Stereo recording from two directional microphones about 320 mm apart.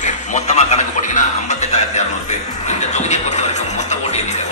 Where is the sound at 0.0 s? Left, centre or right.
Left.